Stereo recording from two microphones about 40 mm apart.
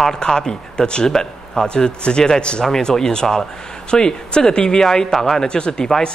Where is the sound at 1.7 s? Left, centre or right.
Left.